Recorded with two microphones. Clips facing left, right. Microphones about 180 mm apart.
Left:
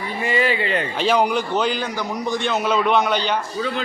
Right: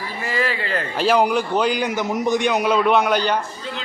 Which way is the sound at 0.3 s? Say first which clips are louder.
Left 3 dB; 25° left (ahead or behind).